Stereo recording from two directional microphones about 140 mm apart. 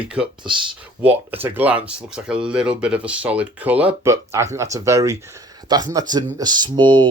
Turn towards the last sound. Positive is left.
turn(degrees=-35)  # may be behind; listen again after turning